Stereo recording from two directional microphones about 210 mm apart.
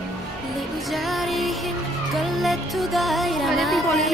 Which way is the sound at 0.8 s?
Centre (ahead or behind).